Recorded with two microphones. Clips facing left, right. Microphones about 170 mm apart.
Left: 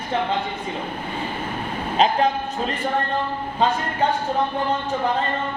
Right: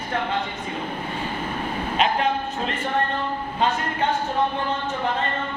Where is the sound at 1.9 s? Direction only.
35° left (ahead or behind).